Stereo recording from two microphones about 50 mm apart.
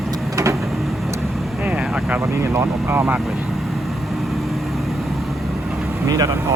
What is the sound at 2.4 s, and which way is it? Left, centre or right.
Vehicle, right.